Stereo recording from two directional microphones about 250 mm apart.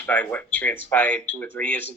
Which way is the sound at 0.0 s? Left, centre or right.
Centre.